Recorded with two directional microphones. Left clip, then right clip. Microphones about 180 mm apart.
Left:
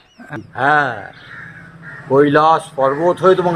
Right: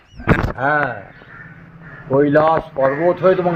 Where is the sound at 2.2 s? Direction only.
15° left (ahead or behind).